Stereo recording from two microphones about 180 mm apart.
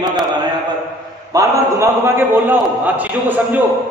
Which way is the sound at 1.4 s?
15° right (ahead or behind).